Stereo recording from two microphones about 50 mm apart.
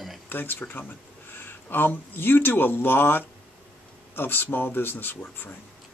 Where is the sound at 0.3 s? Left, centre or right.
Left.